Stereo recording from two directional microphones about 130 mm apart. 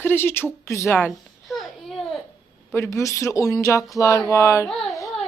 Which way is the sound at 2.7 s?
20° left (ahead or behind).